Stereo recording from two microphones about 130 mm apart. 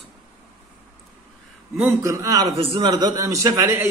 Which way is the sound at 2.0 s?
25° right (ahead or behind).